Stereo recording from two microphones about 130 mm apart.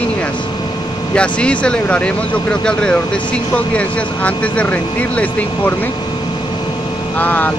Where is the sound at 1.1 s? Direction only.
10° left (ahead or behind).